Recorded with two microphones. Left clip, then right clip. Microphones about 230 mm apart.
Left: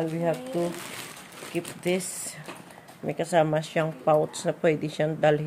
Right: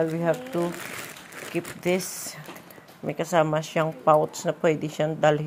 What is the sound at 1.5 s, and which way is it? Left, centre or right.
Speech, centre.